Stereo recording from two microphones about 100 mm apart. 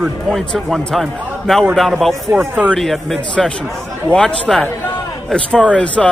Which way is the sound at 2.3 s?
15° right (ahead or behind).